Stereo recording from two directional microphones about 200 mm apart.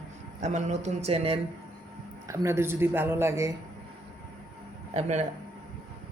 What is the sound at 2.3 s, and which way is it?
Speech, 15° right (ahead or behind).